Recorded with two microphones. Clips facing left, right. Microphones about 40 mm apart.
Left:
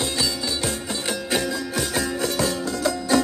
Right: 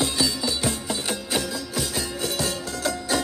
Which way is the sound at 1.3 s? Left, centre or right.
Centre.